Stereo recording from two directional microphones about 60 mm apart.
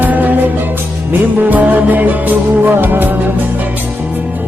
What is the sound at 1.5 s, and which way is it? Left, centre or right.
Music, right.